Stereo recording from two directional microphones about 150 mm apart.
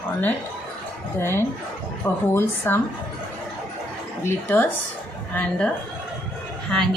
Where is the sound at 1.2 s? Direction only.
15° left (ahead or behind).